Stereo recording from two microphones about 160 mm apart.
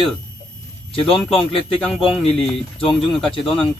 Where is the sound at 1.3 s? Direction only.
35° left (ahead or behind).